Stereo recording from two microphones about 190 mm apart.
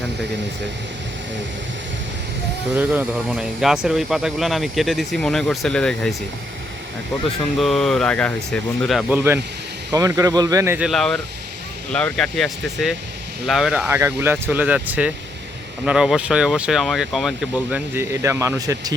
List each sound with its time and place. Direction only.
2.7 s speech: 5° right (ahead or behind)
7.6 s speech: centre (ahead or behind); by 10.8 s 15° right (ahead or behind)
10.8 s speech: centre (ahead or behind); by 18.9 s 20° right (ahead or behind)